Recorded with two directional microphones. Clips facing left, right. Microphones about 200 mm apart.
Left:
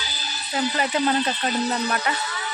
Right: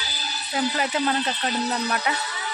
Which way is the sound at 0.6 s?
5° right (ahead or behind).